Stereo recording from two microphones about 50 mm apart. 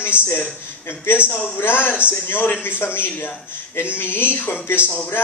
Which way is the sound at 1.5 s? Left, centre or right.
Left.